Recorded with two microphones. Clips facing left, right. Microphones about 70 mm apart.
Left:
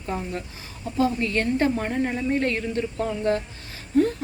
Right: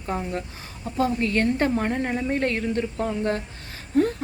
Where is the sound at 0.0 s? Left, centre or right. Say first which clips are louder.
Right 1 dB; right.